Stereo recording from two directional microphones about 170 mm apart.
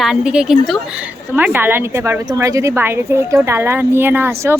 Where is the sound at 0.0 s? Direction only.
5° right (ahead or behind).